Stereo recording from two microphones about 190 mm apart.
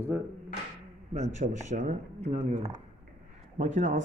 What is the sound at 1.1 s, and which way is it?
Speech, 40° right (ahead or behind).